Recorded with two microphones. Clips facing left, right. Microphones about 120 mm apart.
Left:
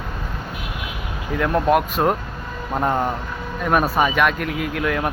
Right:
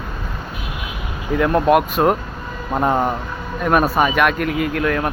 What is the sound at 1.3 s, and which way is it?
Speech, 5° right (ahead or behind).